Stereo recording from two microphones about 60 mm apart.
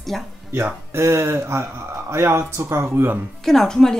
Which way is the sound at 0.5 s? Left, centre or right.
Right.